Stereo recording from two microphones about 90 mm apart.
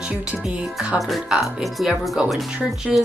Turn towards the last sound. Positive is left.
turn(degrees=0)  # may be behind; listen again after turning